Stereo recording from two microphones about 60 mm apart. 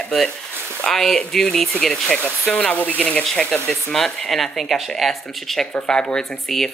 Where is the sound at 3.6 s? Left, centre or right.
Centre.